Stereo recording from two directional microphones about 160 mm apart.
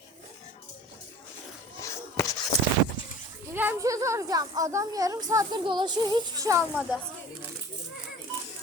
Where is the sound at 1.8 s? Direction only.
20° left (ahead or behind).